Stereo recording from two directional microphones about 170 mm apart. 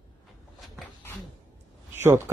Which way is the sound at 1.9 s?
15° right (ahead or behind).